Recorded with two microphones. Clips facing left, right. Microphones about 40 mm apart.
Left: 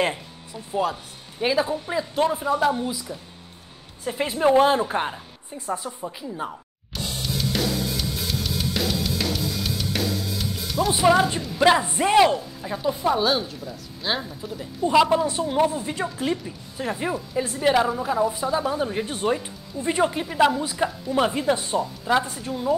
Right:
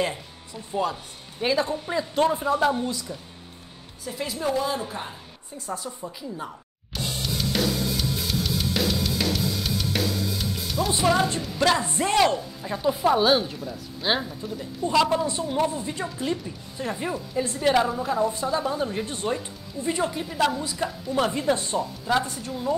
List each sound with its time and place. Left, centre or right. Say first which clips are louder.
1.4 s speech: left 2 dB; centre
4.0 s a woman's voice: left 7 dB; left
5.7 s a woman's voice: left 4 dB; centre
6.9 s music: even; centre
10.9 s a woman's voice: left 4 dB; centre
12.4 s speech: left 1 dB; centre
14.4 s speech: even; centre
14.9 s a woman's voice: left 3 dB; centre
20.0 s a woman's voice: left 7 dB; left
20.4 s a woman's voice: left 4 dB; centre